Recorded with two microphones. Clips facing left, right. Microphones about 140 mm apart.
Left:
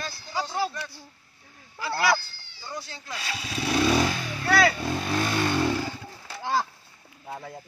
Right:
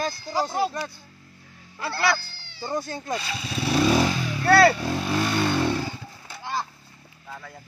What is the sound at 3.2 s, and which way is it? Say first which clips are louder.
Speech: right 2 dB; centre (ahead or behind).